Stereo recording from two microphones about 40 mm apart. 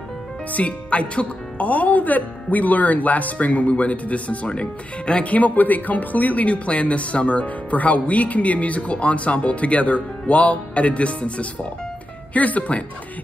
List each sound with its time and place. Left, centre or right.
0.5 s speech: left